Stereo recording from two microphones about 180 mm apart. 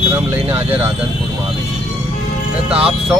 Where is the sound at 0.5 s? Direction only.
10° right (ahead or behind).